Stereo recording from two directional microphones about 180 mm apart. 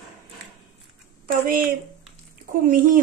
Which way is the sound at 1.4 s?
50° right (ahead or behind).